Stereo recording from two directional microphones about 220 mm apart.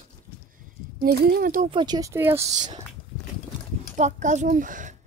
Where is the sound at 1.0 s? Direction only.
45° right (ahead or behind).